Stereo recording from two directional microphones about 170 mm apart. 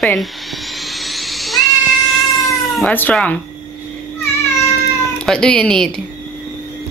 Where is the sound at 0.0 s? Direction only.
Centre (ahead or behind).